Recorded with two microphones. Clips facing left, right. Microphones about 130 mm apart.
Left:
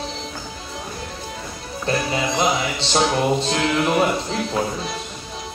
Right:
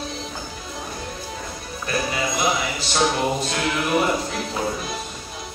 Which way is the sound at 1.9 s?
30° left (ahead or behind).